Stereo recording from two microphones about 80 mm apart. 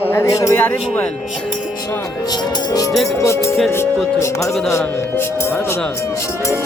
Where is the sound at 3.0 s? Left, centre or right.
Left.